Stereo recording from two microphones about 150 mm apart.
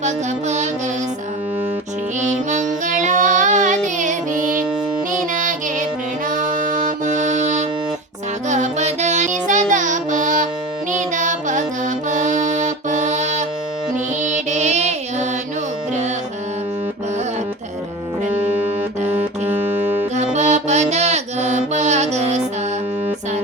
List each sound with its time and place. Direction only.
0.0 s music: 50° right (ahead or behind)
2.2 s music: 50° right (ahead or behind)
19.0 s music: 15° right (ahead or behind)
20.3 s music: 50° right (ahead or behind)